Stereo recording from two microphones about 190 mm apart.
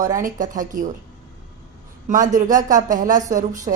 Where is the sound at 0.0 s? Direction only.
45° right (ahead or behind).